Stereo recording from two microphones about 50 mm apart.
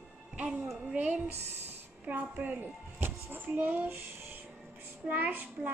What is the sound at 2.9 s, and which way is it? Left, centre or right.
Speech, right.